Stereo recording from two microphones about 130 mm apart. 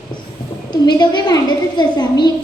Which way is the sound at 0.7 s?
35° left (ahead or behind).